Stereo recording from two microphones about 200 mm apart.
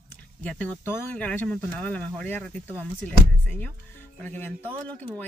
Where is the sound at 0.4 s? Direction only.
5° left (ahead or behind).